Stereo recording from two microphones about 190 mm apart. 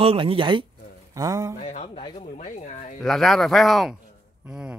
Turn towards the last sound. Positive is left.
turn(degrees=-5)  # may be behind; listen again after turning